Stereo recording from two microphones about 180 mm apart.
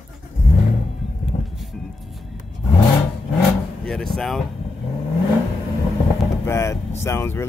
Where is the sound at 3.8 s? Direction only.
5° left (ahead or behind).